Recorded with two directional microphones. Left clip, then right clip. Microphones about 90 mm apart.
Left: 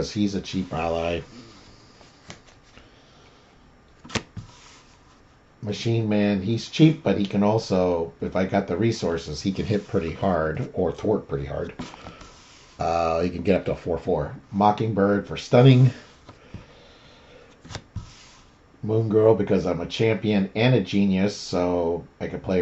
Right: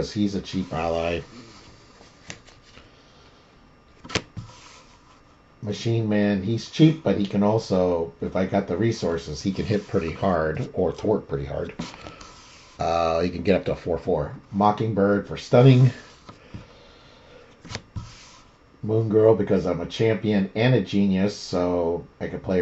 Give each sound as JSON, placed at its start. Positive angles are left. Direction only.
{"t": 0.0, "sound": "speech", "side_deg": 5}
{"t": 5.6, "sound": "speech", "side_deg": 5}
{"t": 9.8, "sound": "speech", "side_deg": -15}
{"t": 11.7, "sound": "music", "side_deg": -20}
{"t": 12.7, "sound": "speech", "side_deg": 0}
{"t": 17.6, "sound": "shuffling cards", "side_deg": -15}
{"t": 18.9, "sound": "speech", "side_deg": 5}